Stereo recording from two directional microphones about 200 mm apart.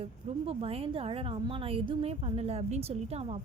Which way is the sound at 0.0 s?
30° right (ahead or behind).